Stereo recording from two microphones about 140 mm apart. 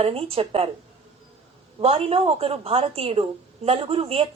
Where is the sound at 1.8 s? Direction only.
45° right (ahead or behind).